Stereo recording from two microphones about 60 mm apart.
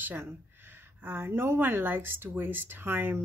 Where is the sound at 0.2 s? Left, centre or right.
Right.